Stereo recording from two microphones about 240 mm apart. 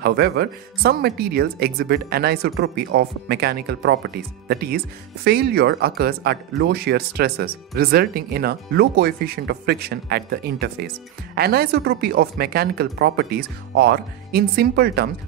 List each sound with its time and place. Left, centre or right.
0.0 s speech: right